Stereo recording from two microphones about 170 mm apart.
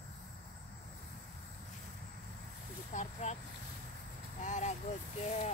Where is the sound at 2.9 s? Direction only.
40° left (ahead or behind).